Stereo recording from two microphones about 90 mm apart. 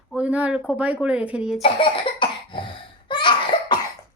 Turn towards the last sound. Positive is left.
turn(degrees=55)  # may be behind; listen again after turning